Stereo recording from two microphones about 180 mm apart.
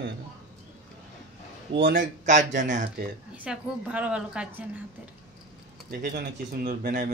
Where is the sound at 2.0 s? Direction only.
45° right (ahead or behind).